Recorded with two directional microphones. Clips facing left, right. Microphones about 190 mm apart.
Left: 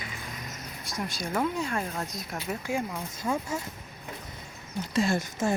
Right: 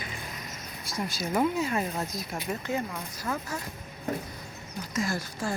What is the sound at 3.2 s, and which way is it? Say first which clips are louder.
Speech: left 4 dB; 20° left (ahead or behind).